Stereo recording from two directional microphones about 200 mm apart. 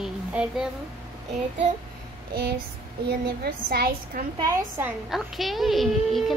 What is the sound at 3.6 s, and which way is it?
Speech, 50° right (ahead or behind).